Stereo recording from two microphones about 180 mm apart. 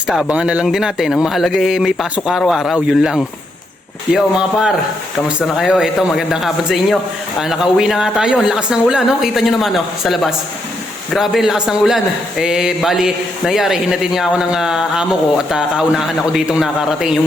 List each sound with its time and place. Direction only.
0.1 s a man's voice: 5° right (ahead or behind)